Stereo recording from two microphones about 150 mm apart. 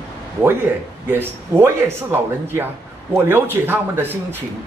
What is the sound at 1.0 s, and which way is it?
Speech, 15° right (ahead or behind).